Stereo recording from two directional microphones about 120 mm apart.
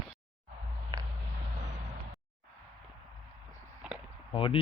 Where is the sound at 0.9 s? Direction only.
35° right (ahead or behind).